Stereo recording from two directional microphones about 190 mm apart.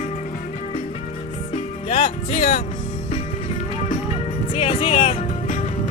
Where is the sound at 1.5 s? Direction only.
35° left (ahead or behind).